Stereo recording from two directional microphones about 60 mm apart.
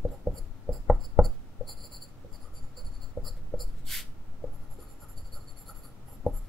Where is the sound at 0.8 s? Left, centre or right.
Centre.